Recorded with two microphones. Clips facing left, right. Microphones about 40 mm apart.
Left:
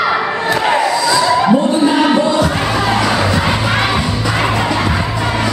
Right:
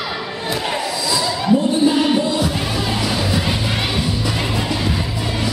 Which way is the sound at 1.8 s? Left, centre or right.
Left.